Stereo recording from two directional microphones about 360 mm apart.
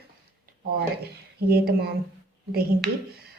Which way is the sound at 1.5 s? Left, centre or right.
Right.